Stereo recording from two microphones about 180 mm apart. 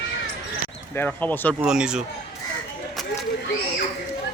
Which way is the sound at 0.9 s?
10° left (ahead or behind).